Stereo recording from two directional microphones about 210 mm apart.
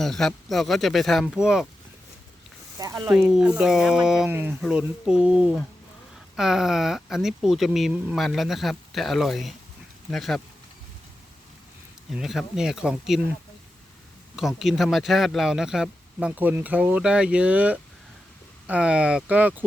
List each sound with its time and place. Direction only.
0.0 s speech: centre (ahead or behind)
2.7 s speech: 15° right (ahead or behind)
3.1 s speech: 5° right (ahead or behind)
12.1 s speech: centre (ahead or behind)
14.3 s speech: centre (ahead or behind)